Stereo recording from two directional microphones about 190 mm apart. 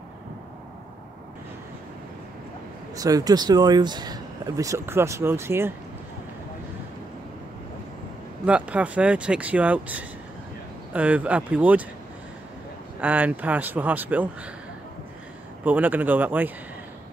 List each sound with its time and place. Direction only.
3.0 s speech: 20° right (ahead or behind)
8.5 s speech: 5° right (ahead or behind)
13.0 s speech: 10° right (ahead or behind)
15.6 s speech: 10° right (ahead or behind)